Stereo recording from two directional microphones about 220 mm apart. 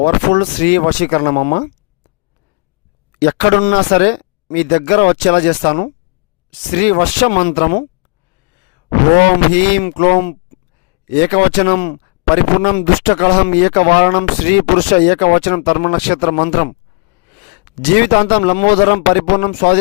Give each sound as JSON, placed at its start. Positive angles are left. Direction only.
{"t": 0.0, "sound": "speech", "side_deg": 50}
{"t": 3.2, "sound": "speech", "side_deg": 50}
{"t": 9.8, "sound": "speech", "side_deg": 40}
{"t": 17.9, "sound": "speech", "side_deg": 45}